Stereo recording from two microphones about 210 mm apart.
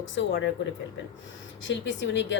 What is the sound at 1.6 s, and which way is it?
Speech, 65° left (ahead or behind).